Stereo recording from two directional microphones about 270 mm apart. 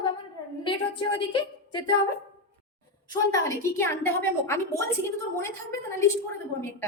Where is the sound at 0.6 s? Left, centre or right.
Centre.